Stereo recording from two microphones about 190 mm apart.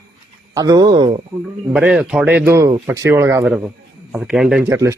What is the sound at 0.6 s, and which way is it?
Speech, 20° right (ahead or behind).